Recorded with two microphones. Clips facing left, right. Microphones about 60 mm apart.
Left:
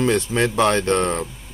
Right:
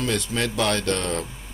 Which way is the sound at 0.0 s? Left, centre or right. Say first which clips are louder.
Left 6 dB; left.